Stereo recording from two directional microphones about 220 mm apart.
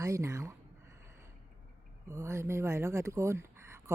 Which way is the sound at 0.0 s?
15° right (ahead or behind).